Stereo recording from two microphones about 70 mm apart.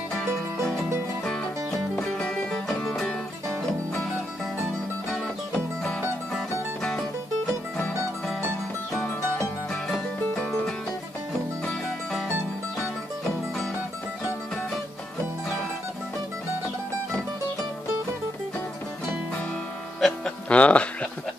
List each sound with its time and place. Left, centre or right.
0.1 s music: centre
6.8 s music: centre
20.0 s music: centre
20.4 s music: centre